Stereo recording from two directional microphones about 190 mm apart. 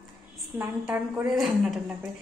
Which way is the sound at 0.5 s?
10° right (ahead or behind).